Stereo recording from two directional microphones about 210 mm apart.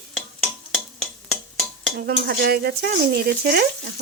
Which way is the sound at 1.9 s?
45° right (ahead or behind).